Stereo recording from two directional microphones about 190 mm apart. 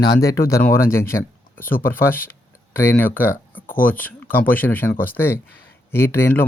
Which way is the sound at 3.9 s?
10° left (ahead or behind).